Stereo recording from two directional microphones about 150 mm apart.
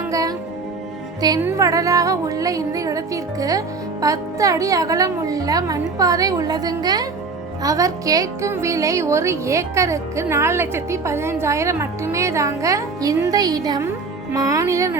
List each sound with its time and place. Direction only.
0.1 s music: 25° right (ahead or behind)
1.5 s speech: 20° right (ahead or behind)